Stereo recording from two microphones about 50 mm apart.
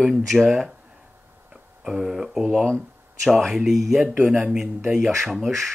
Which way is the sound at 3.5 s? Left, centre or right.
Centre.